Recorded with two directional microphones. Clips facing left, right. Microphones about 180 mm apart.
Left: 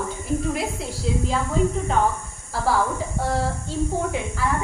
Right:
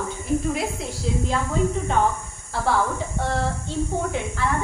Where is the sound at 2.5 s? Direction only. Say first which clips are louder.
Even; 5° left (ahead or behind).